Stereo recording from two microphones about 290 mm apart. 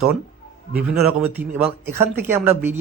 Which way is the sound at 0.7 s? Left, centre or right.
Centre.